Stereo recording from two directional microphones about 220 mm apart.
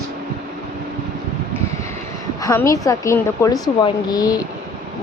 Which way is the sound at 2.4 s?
15° left (ahead or behind).